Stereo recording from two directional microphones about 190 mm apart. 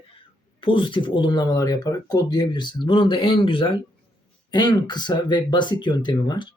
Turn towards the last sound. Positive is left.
turn(degrees=20)  # may be behind; listen again after turning